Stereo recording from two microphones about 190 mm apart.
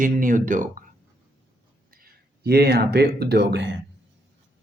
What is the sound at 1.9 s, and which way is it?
Speech, 50° right (ahead or behind).